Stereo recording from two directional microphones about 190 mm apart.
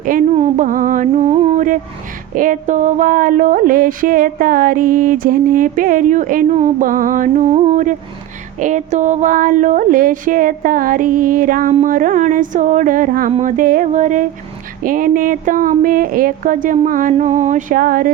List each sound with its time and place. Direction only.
0.0 s speech: 45° right (ahead or behind)
0.3 s music: 40° right (ahead or behind)
2.3 s speech: 45° right (ahead or behind)
13.3 s a sound: 45° right (ahead or behind)
14.8 s speech: 45° right (ahead or behind)